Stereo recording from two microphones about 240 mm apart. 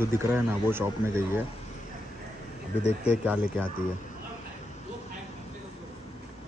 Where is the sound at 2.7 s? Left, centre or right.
Left.